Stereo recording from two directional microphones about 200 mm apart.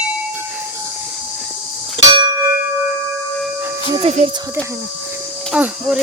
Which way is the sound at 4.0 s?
30° right (ahead or behind).